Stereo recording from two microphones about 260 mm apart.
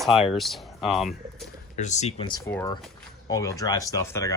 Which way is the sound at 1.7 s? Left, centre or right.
Left.